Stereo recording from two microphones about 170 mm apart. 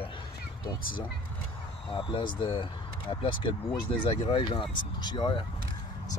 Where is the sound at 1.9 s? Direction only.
30° left (ahead or behind).